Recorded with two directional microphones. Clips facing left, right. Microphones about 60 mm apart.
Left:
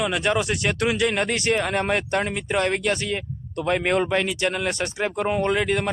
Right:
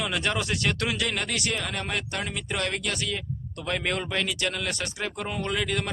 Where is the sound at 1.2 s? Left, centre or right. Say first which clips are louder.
Left 7 dB; left.